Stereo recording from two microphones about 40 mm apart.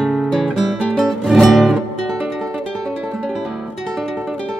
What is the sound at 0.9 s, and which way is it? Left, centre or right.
Music, centre.